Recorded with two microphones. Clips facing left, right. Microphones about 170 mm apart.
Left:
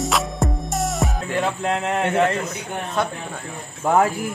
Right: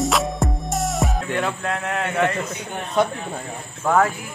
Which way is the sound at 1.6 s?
25° left (ahead or behind).